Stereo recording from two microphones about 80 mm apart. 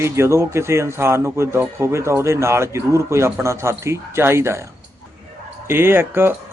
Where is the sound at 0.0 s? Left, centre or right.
Right.